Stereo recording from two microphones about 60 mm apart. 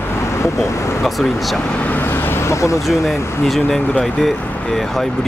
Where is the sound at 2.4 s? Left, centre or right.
Left.